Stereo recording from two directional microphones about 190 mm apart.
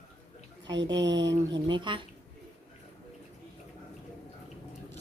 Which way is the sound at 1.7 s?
25° right (ahead or behind).